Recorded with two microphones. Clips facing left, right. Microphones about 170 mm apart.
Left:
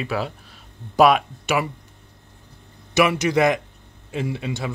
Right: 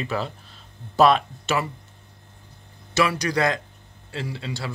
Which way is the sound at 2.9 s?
20° left (ahead or behind).